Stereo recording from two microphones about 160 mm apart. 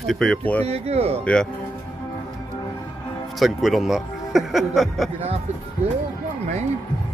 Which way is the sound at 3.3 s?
Centre (ahead or behind).